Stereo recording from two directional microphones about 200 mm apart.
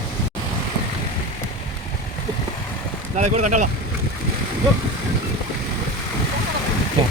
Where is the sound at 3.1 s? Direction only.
35° right (ahead or behind).